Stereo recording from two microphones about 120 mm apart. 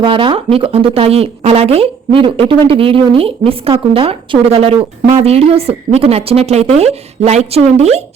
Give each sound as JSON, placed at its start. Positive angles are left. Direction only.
{"t": 0.0, "sound": "a woman's voice", "side_deg": -45}